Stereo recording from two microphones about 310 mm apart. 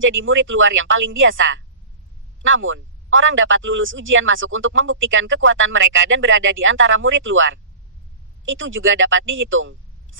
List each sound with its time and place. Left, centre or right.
0.0 s speech: right